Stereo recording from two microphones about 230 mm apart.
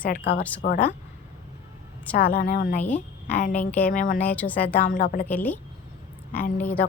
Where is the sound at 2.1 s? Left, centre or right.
Left.